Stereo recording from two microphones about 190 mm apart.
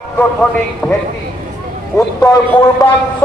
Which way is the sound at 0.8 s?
10° left (ahead or behind).